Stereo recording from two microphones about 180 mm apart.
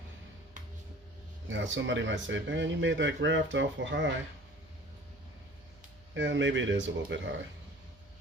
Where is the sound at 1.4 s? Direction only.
90° right.